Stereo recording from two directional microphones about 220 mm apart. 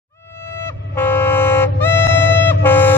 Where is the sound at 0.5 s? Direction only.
10° left (ahead or behind).